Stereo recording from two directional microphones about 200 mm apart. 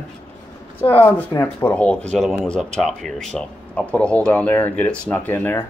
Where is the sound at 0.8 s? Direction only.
10° left (ahead or behind).